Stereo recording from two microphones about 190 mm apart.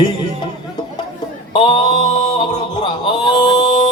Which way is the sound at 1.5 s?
25° left (ahead or behind).